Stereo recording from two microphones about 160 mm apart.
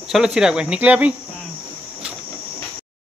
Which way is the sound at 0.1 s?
5° right (ahead or behind).